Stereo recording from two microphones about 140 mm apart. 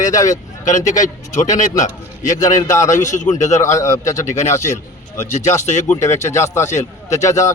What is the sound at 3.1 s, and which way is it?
Speech, 60° left (ahead or behind).